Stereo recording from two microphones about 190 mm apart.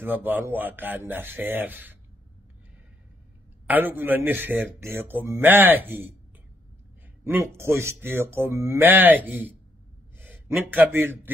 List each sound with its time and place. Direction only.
0.0 s speech: 10° right (ahead or behind)
3.6 s speech: 10° right (ahead or behind)
7.2 s a man's voice: 10° right (ahead or behind)